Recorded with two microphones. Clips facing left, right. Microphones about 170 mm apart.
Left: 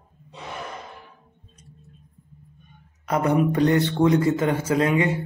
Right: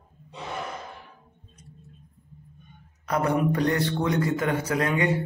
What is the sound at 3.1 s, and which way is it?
Speech, 20° left (ahead or behind).